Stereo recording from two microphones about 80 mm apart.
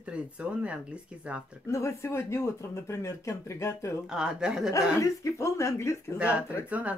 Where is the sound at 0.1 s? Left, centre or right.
Centre.